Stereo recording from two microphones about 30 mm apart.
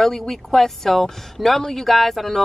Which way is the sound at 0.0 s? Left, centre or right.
Centre.